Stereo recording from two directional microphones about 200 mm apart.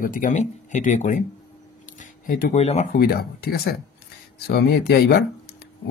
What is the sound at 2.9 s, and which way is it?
Speech, 50° left (ahead or behind).